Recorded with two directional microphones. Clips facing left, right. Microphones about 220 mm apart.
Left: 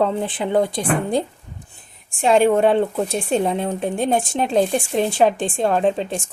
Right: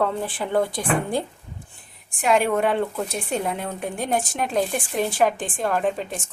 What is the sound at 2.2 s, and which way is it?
Speech, 30° left (ahead or behind).